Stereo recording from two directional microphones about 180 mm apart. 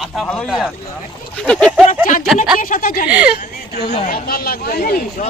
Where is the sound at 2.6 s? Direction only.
50° left (ahead or behind).